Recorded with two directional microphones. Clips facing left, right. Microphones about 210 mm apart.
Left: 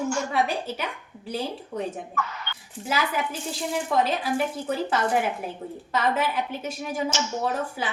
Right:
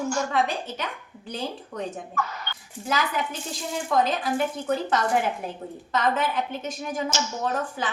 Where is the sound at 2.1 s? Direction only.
40° right (ahead or behind).